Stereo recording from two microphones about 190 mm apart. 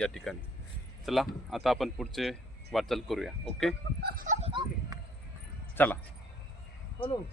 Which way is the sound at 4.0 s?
50° right (ahead or behind).